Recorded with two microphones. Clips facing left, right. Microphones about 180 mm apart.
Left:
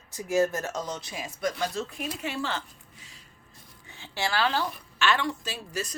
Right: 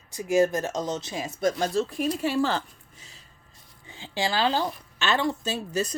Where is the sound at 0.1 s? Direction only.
15° right (ahead or behind); by 2.6 s 35° right (ahead or behind).